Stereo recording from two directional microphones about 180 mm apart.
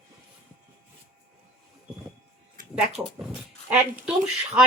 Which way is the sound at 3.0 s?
10° right (ahead or behind).